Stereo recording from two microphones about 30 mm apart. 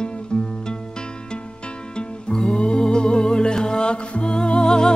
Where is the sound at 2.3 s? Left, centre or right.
Left.